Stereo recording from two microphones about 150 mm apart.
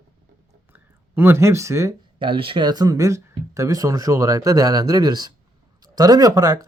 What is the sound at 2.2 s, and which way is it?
Speech, 35° right (ahead or behind).